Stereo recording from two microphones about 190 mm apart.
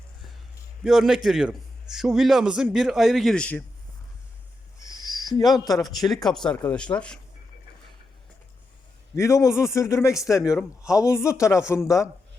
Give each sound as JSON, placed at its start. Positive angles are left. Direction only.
{"t": 0.9, "sound": "a man's voice", "side_deg": -5}
{"t": 4.8, "sound": "owl", "side_deg": 20}
{"t": 6.1, "sound": "a man's voice", "side_deg": 0}
{"t": 9.1, "sound": "speech", "side_deg": 15}
{"t": 10.3, "sound": "a man's voice", "side_deg": -5}
{"t": 11.0, "sound": "speech", "side_deg": 15}